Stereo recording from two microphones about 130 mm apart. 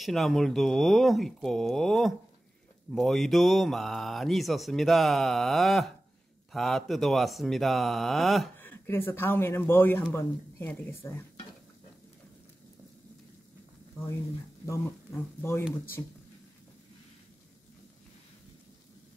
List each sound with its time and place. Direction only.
0.0 s speech: centre (ahead or behind)
8.5 s speech: 15° left (ahead or behind)
15.1 s speech: 20° left (ahead or behind)